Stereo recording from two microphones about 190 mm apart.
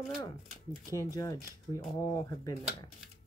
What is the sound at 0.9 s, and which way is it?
Speech, 20° left (ahead or behind).